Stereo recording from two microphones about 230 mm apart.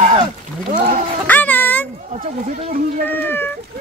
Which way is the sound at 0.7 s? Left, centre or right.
Right.